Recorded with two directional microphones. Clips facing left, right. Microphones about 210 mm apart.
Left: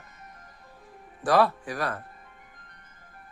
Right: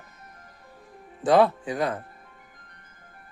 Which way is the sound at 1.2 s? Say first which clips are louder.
Right 3 dB; 20° right (ahead or behind).